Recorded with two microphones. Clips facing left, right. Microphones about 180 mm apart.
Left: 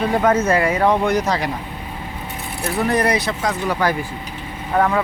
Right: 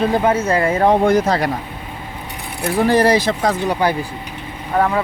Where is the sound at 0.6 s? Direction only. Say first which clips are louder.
Right 3 dB; 45° right (ahead or behind).